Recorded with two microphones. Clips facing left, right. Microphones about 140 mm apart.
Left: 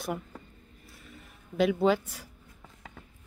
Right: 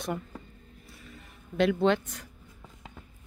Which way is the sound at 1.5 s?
5° left (ahead or behind).